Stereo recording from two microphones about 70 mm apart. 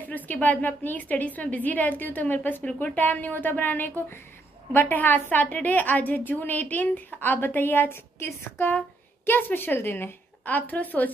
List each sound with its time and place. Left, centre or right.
0.0 s a woman's voice: left